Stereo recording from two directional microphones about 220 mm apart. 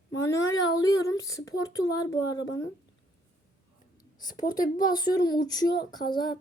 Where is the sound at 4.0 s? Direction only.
20° left (ahead or behind).